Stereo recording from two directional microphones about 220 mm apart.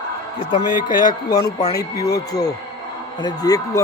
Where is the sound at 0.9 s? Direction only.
20° left (ahead or behind).